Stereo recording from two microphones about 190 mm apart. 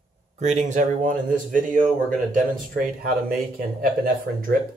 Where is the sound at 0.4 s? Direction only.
40° right (ahead or behind).